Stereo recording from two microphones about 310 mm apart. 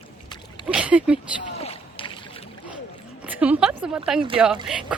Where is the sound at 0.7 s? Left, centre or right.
Centre.